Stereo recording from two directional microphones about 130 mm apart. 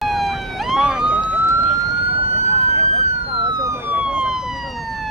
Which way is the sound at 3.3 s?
40° right (ahead or behind).